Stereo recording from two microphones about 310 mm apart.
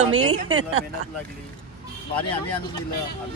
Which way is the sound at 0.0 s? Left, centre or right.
Centre.